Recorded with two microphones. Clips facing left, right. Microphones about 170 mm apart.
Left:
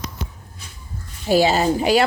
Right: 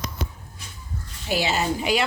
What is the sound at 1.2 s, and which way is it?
Speech, 40° left (ahead or behind).